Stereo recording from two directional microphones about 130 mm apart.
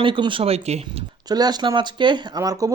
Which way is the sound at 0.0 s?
40° right (ahead or behind).